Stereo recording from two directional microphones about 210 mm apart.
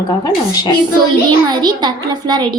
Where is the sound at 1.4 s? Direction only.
20° right (ahead or behind).